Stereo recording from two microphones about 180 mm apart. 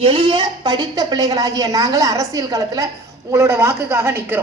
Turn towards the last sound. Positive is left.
turn(degrees=-15)  # may be behind; listen again after turning